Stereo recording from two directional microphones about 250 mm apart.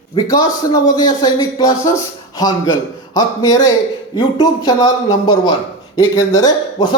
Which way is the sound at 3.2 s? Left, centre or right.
Centre.